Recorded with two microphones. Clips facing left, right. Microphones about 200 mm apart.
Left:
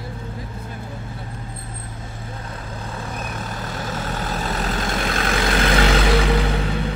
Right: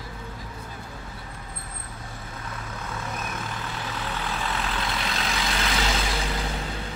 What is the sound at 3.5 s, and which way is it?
Vehicle, 40° left (ahead or behind).